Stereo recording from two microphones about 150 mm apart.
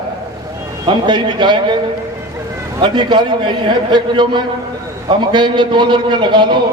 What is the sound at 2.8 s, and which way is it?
A man's voice, 30° right (ahead or behind).